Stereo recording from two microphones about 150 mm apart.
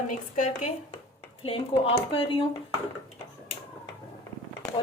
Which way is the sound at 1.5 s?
40° left (ahead or behind).